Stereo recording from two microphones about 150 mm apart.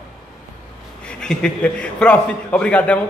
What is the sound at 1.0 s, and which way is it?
A man's voice, 5° left (ahead or behind).